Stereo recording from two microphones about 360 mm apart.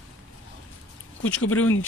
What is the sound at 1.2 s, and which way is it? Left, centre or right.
Speech, left.